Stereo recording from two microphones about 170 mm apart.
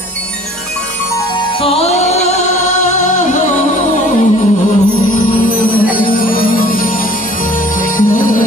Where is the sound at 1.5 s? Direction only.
35° left (ahead or behind).